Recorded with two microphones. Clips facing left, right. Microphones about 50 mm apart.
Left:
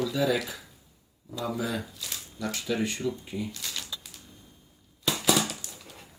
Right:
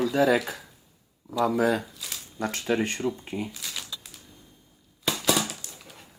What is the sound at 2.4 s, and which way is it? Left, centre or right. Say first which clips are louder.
Speech: right 3 dB; right.